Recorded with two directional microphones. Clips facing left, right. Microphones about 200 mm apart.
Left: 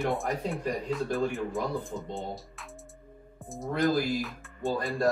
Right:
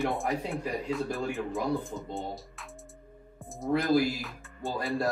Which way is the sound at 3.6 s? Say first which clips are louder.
Right 2 dB; centre (ahead or behind).